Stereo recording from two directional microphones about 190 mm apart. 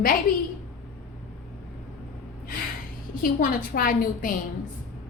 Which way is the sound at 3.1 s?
50° left (ahead or behind).